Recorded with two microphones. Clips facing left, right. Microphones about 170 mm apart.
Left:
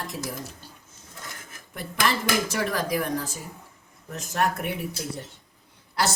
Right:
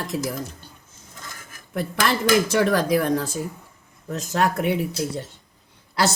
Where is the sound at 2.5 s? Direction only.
80° right.